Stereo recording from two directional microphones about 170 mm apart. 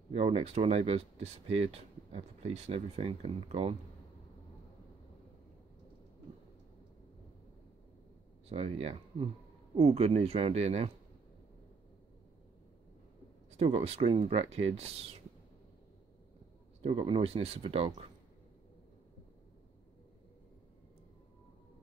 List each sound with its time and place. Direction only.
0.1 s speech: 35° right (ahead or behind)
8.5 s speech: 35° right (ahead or behind)
13.5 s speech: 35° right (ahead or behind)
16.8 s speech: 35° right (ahead or behind)